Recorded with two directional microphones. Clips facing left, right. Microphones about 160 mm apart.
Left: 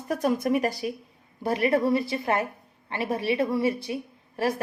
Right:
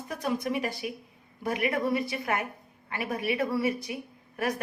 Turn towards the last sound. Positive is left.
turn(degrees=30)  # may be behind; listen again after turning